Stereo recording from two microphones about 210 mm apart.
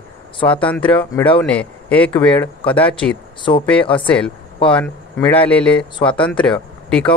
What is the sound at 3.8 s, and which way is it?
Speech, 25° left (ahead or behind).